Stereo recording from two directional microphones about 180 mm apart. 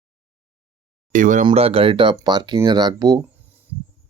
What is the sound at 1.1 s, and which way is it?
Speech, 45° right (ahead or behind).